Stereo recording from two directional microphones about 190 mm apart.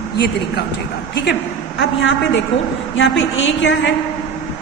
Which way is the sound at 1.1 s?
60° left (ahead or behind).